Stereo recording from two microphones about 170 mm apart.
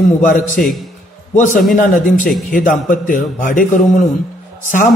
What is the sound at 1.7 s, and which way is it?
A man's voice, 55° left (ahead or behind).